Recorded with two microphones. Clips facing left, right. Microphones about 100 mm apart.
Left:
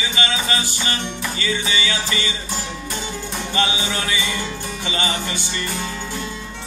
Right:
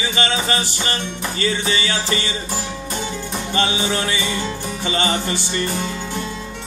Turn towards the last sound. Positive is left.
turn(degrees=-35)  # may be behind; listen again after turning